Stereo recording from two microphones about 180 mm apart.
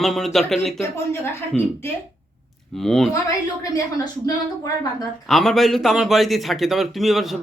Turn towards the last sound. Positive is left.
turn(degrees=0)  # may be behind; listen again after turning